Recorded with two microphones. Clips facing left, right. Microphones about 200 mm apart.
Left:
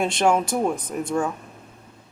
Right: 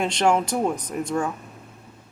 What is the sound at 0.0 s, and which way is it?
Speech, 10° left (ahead or behind).